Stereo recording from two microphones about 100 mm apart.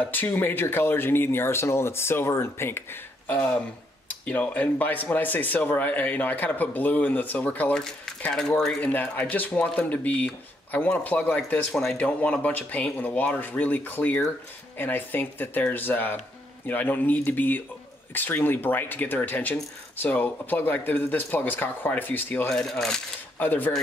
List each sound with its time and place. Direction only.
0.0 s speech: 20° left (ahead or behind)
11.7 s coin: centre (ahead or behind)
12.0 s speech: 15° left (ahead or behind)
22.5 s coin: 5° left (ahead or behind)
23.4 s speech: 20° left (ahead or behind)